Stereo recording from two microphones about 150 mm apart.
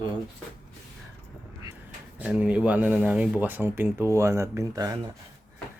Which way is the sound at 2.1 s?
10° right (ahead or behind).